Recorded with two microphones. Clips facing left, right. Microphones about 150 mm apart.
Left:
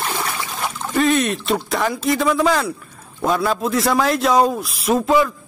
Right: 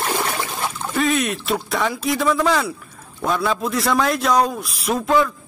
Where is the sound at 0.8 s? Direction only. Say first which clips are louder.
Left 3 dB; centre (ahead or behind).